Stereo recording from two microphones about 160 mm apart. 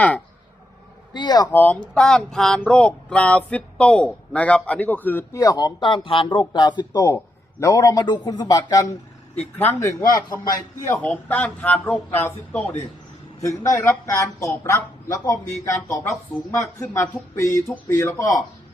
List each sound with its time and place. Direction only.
1.1 s a man's voice: 25° left (ahead or behind)